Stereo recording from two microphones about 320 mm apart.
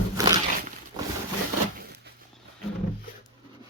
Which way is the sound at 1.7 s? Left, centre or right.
Right.